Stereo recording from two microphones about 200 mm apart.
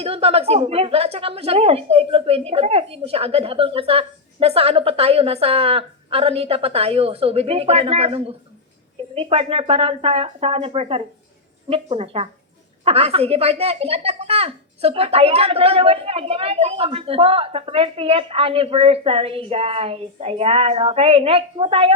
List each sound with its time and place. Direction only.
0.0 s speech: 30° right (ahead or behind)